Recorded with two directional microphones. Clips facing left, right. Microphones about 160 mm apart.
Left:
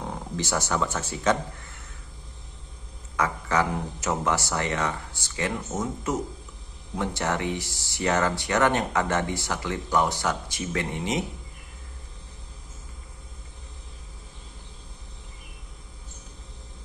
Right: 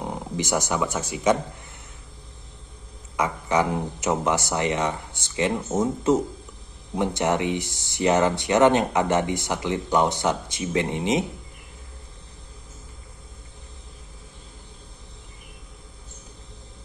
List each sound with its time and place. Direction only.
0.0 s speech: 15° right (ahead or behind)
3.2 s speech: 20° right (ahead or behind)